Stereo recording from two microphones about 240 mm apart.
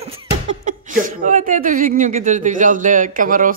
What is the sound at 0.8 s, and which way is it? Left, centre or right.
Speech, right.